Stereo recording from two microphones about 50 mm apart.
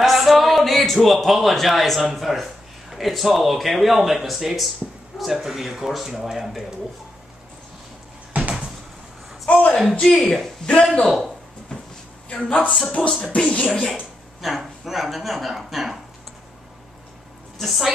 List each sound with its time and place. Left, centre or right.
0.0 s music: centre
0.9 s speech: centre
8.3 s a sound: right
9.5 s a sound: left
10.0 s speech: centre
11.7 s drawer open or close: centre
12.3 s speech: left
13.7 s speech: centre
14.4 s speech: centre
17.6 s speech: centre